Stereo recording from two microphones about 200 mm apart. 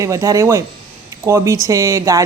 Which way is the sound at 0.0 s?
15° right (ahead or behind).